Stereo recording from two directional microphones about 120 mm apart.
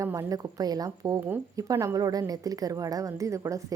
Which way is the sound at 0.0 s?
25° right (ahead or behind).